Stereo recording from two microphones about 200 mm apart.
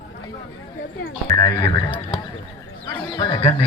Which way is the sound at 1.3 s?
20° left (ahead or behind).